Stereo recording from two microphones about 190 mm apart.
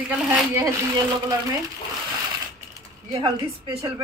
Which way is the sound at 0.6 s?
15° right (ahead or behind).